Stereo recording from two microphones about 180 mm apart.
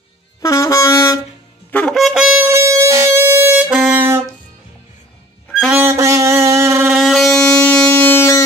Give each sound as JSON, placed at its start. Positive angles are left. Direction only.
{"t": 0.4, "sound": "wind instrument", "side_deg": 15}
{"t": 1.7, "sound": "wind instrument", "side_deg": 5}
{"t": 5.5, "sound": "music", "side_deg": 0}
{"t": 5.8, "sound": "a sound", "side_deg": -15}
{"t": 6.9, "sound": "wind instrument", "side_deg": 0}